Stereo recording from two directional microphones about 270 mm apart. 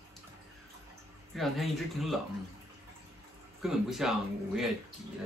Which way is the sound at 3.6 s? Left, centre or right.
Centre.